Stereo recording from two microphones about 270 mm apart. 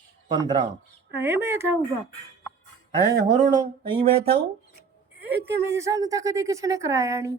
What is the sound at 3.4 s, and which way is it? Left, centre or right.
Speech, centre.